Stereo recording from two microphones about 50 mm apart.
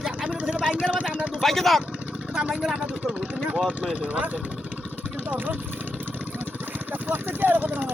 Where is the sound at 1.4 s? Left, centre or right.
Centre.